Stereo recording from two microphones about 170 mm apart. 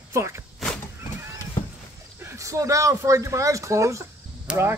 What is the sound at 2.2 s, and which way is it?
Speech, 15° right (ahead or behind).